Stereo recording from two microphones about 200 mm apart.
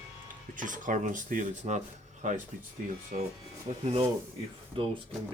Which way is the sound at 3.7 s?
35° right (ahead or behind).